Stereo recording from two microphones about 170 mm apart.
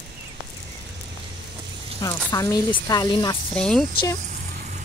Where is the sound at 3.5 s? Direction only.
5° left (ahead or behind).